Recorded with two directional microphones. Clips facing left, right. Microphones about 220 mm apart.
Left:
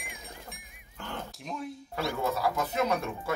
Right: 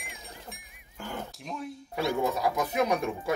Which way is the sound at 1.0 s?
5° right (ahead or behind).